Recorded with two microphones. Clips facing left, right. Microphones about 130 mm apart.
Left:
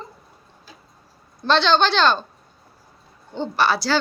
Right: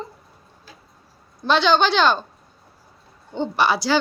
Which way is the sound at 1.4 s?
10° right (ahead or behind).